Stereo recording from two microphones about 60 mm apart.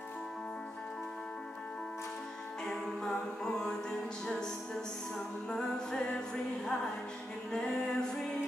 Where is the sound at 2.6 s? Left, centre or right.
Centre.